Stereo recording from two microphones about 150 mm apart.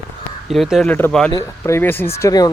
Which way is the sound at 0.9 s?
10° left (ahead or behind).